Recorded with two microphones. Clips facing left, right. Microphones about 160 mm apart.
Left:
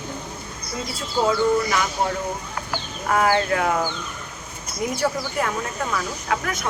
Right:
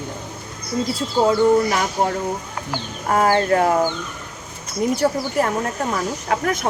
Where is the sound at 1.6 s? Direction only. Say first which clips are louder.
Right 3 dB; 45° right (ahead or behind).